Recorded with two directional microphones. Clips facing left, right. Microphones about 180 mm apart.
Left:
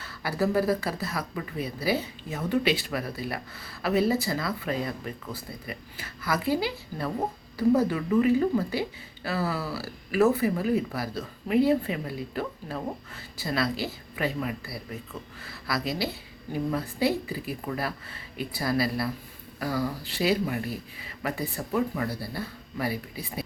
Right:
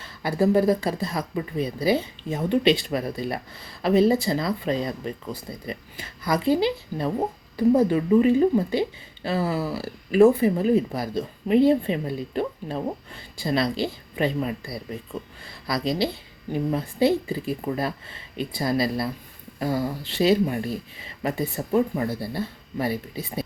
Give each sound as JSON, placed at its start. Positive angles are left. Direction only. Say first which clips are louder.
{"t": 0.0, "sound": "speech", "louder": "right 5 dB", "side_deg": -25}